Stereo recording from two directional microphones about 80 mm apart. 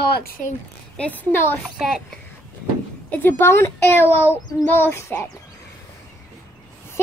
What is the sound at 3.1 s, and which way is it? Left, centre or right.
A child's voice, left.